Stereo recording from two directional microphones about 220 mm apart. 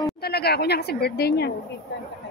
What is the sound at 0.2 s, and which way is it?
A woman's voice, 45° left (ahead or behind).